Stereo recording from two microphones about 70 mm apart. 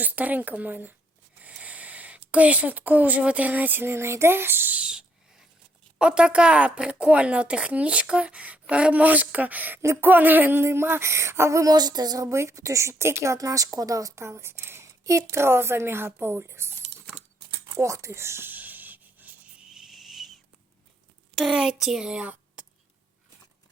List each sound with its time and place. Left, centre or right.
0.0 s speech: right
4.8 s owl: centre
6.0 s speech: centre; by 11.6 s right
11.6 s speech: right
12.4 s speech: right
15.0 s speech: right
17.7 s speech: right
18.5 s a sound: right
19.6 s a sound: centre
21.3 s a child's voice: centre